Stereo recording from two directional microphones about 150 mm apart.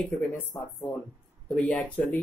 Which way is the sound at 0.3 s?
15° left (ahead or behind).